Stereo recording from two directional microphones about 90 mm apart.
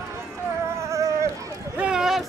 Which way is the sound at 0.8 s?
35° right (ahead or behind).